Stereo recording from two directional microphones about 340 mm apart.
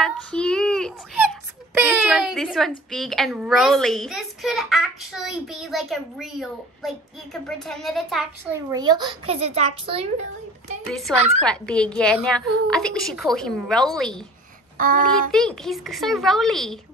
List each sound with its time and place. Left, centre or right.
0.0 s child singing: centre
2.9 s a woman's voice: centre
8.7 s a child's voice: centre
10.9 s a woman's voice: centre
11.1 s a child's voice: centre
11.4 s a woman's voice: centre
14.8 s a child's voice: right
15.3 s a woman's voice: centre